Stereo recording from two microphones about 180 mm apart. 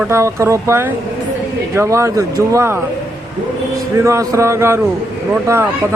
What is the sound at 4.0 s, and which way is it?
Speech, 15° right (ahead or behind).